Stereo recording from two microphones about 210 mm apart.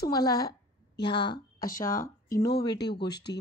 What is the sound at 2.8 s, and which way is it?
Speech, 50° left (ahead or behind).